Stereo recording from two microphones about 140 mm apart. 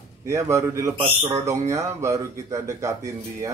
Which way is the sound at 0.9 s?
40° right (ahead or behind).